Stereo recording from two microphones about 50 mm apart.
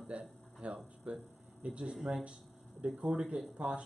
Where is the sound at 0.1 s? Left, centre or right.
Right.